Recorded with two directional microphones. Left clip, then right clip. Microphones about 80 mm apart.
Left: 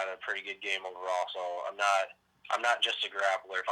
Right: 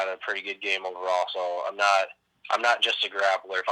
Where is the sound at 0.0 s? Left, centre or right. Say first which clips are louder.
Right 6 dB; right.